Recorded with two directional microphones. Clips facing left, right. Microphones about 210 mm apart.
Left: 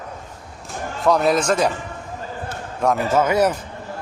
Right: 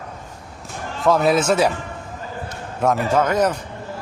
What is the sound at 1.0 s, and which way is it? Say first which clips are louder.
Speech: right 1 dB; centre (ahead or behind).